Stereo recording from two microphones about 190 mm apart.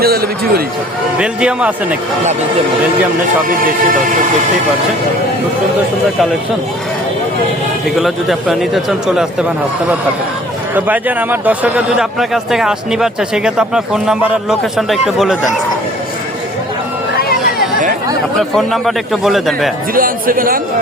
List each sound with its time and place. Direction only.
0.0 s a man's voice: 55° right (ahead or behind)
1.2 s a man's voice: 5° right (ahead or behind)
7.9 s a man's voice: centre (ahead or behind)
10.8 s a man's voice: 10° right (ahead or behind)
18.3 s a man's voice: centre (ahead or behind)
19.9 s speech: 50° right (ahead or behind)